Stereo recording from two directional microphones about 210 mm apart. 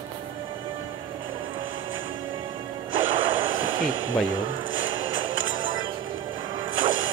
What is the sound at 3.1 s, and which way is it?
Music, 25° right (ahead or behind).